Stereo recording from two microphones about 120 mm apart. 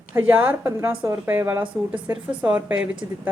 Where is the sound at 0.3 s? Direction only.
15° right (ahead or behind).